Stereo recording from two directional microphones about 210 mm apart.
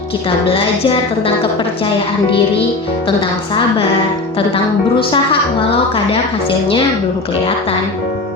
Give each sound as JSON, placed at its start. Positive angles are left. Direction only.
{"t": 4.4, "sound": "a woman's voice", "side_deg": 25}